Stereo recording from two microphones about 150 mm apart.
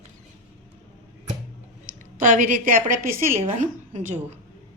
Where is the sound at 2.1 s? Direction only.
65° right (ahead or behind).